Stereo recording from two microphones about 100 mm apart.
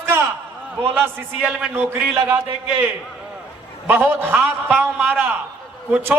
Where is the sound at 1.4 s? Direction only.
10° right (ahead or behind).